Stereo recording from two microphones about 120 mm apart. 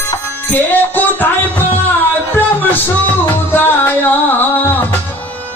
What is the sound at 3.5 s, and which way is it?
Music, 15° left (ahead or behind).